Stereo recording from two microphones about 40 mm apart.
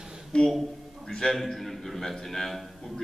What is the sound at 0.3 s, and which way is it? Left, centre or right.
Speech, left.